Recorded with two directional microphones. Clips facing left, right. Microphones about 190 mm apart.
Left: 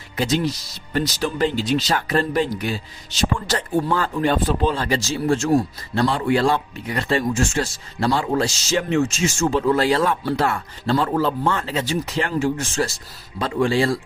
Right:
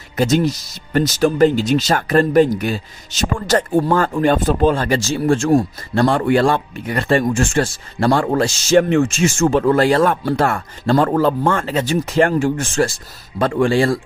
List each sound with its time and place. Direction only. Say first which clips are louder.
0.2 s speech: right 5 dB; 45° right (ahead or behind)